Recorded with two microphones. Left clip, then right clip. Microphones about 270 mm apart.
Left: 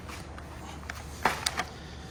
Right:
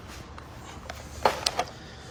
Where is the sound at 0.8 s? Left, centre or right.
Right.